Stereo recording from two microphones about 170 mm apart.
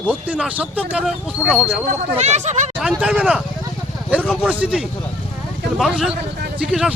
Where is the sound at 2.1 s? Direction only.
40° right (ahead or behind).